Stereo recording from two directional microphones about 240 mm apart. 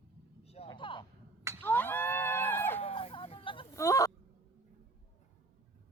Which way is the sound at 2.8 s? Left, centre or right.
Left.